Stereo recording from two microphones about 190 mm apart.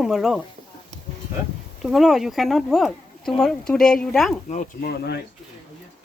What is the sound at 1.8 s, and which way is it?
Speech, centre (ahead or behind).